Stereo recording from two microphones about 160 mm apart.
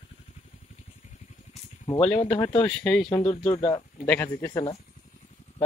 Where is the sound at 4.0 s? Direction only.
10° left (ahead or behind).